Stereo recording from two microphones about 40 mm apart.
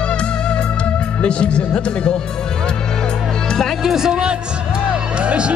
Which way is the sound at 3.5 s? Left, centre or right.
Centre.